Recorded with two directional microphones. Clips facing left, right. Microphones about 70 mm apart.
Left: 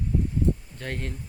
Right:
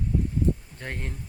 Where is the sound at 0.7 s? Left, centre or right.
Centre.